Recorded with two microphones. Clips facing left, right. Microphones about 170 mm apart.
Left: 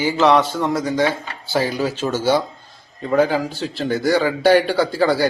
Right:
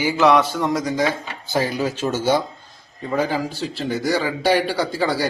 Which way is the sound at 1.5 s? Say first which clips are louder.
Left 1 dB; 45° left (ahead or behind).